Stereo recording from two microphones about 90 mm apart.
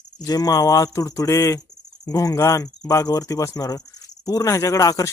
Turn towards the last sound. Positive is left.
turn(degrees=40)  # may be behind; listen again after turning